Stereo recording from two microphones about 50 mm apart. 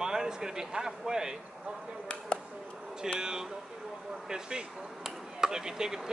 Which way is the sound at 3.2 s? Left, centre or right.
Centre.